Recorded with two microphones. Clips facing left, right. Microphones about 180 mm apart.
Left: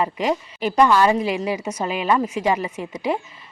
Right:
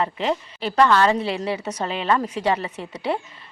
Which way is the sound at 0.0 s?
10° left (ahead or behind).